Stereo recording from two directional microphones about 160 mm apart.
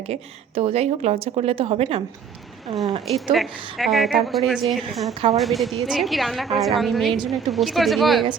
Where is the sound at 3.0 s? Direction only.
Centre (ahead or behind).